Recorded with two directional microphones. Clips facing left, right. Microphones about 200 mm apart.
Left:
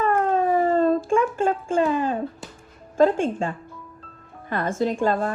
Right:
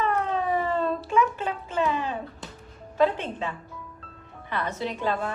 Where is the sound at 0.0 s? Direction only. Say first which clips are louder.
Left 5 dB; 45° left (ahead or behind).